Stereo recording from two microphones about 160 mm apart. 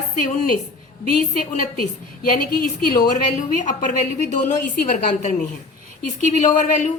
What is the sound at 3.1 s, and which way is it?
Speech, 50° left (ahead or behind).